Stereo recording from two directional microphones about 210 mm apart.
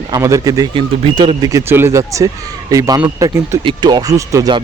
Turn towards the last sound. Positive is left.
turn(degrees=-15)  # may be behind; listen again after turning